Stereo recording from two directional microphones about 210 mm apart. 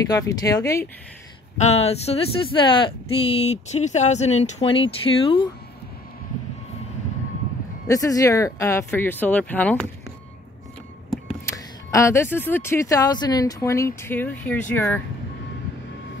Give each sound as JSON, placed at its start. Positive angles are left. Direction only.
{"t": 0.1, "sound": "speech", "side_deg": 15}
{"t": 1.6, "sound": "speech", "side_deg": 30}
{"t": 7.9, "sound": "speech", "side_deg": 15}
{"t": 11.5, "sound": "speech", "side_deg": 15}